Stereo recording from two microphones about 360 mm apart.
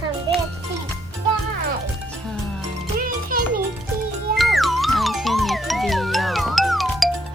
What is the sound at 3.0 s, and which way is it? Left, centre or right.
Music, right.